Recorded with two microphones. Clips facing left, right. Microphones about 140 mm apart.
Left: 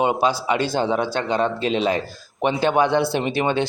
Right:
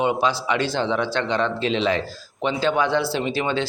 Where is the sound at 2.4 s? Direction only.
55° left (ahead or behind).